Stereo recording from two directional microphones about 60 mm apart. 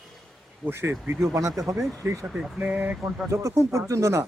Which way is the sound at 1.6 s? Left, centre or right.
Right.